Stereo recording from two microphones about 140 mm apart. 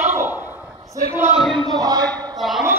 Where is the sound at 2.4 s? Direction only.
Centre (ahead or behind).